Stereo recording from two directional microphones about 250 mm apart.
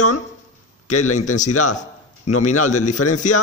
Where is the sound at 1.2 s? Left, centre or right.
Left.